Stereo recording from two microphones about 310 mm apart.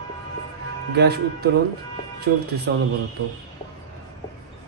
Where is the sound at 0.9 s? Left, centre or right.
Right.